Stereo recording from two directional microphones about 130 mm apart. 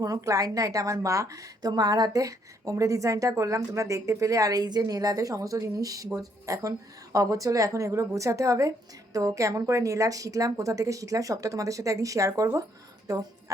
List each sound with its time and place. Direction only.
0.0 s a woman's voice: 25° right (ahead or behind)